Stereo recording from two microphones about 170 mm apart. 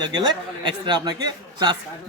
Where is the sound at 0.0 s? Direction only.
25° right (ahead or behind).